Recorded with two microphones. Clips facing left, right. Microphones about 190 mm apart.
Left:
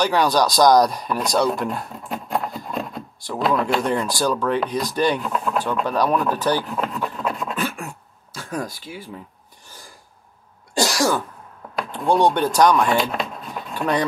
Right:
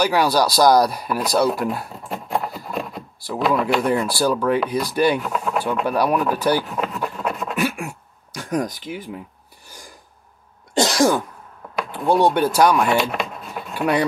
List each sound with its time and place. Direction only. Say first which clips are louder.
0.0 s speech: even; 10° right (ahead or behind)
7.5 s throat clearing: right 4 dB; 15° right (ahead or behind)
9.7 s filing: right 2 dB; 15° right (ahead or behind)
10.7 s cough: right 3 dB; 20° right (ahead or behind)
11.9 s speech: right 1 dB; 5° right (ahead or behind)